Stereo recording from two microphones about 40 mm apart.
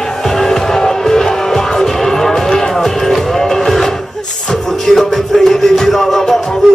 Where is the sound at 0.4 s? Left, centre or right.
Centre.